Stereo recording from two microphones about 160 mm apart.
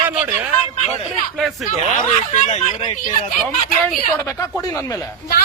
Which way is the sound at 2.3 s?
50° left (ahead or behind).